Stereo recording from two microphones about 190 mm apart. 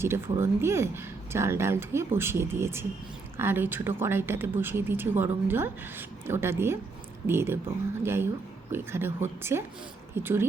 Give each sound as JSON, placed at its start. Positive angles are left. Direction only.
{"t": 0.0, "sound": "a woman's voice", "side_deg": -15}